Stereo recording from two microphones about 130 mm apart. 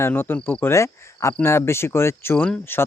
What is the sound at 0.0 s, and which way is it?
Speech, 15° left (ahead or behind).